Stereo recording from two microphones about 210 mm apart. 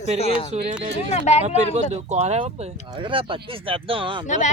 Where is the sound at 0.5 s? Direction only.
30° right (ahead or behind).